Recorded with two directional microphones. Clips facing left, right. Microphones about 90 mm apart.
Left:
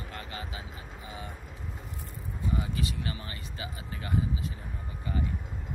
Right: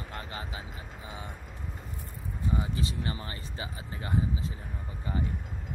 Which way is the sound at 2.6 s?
30° right (ahead or behind).